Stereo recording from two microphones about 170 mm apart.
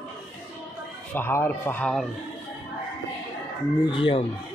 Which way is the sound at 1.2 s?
15° left (ahead or behind).